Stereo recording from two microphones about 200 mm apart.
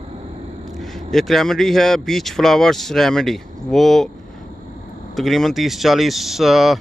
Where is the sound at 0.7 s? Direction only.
Centre (ahead or behind).